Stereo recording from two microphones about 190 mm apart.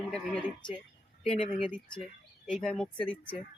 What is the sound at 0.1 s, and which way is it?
Speech, 5° left (ahead or behind).